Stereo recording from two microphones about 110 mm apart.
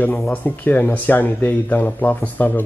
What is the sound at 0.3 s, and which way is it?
A woman's voice, 15° left (ahead or behind).